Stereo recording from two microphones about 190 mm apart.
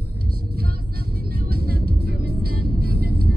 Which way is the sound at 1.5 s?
55° right (ahead or behind).